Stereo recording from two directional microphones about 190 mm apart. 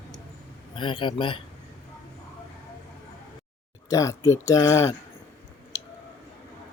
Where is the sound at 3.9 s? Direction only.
15° left (ahead or behind).